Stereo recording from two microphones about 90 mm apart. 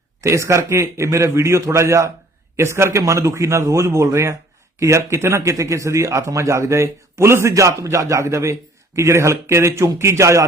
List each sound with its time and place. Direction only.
0.2 s a man's voice: 35° right (ahead or behind)